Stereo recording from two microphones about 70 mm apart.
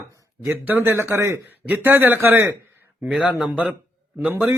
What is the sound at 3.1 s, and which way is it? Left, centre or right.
A man's voice, centre.